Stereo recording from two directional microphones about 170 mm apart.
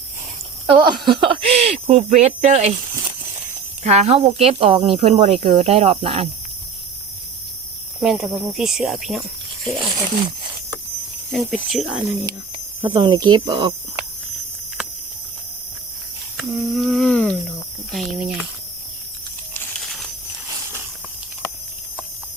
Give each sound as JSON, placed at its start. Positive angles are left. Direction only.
{"t": 0.7, "sound": "speech", "side_deg": -25}
{"t": 3.8, "sound": "speech", "side_deg": -40}
{"t": 8.0, "sound": "speech", "side_deg": 0}
{"t": 9.6, "sound": "speech", "side_deg": -30}
{"t": 11.3, "sound": "speech", "side_deg": 0}
{"t": 12.8, "sound": "speech", "side_deg": -25}
{"t": 16.4, "sound": "humming", "side_deg": 0}
{"t": 17.9, "sound": "speech", "side_deg": 0}